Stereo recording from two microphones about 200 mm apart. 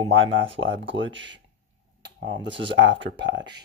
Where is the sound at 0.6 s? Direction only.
70° right (ahead or behind).